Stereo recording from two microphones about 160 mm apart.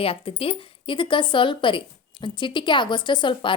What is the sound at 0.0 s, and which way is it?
A woman's voice, 35° left (ahead or behind).